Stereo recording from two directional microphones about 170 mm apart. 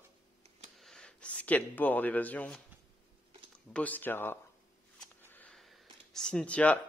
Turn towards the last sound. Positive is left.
turn(degrees=5)  # may be behind; listen again after turning